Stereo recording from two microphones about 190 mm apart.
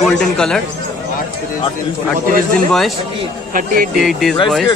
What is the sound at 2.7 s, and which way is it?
Speech, centre (ahead or behind).